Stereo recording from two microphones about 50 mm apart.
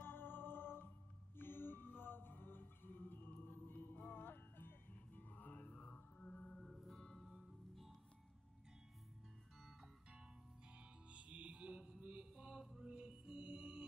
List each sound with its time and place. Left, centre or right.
0.0 s music: left
6.6 s music: centre
9.6 s music: centre
10.8 s music: right